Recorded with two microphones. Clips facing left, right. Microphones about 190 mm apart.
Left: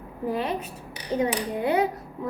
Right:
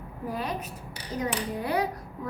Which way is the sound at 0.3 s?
25° left (ahead or behind).